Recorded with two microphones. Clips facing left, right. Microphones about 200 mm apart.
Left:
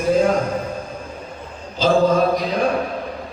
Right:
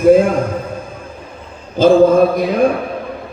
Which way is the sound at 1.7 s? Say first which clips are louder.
Right 7 dB; 55° right (ahead or behind).